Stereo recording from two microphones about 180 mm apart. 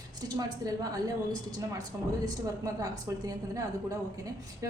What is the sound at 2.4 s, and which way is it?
Speech, 20° right (ahead or behind).